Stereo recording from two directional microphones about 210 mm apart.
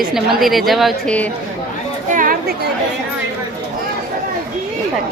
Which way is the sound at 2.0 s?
40° right (ahead or behind).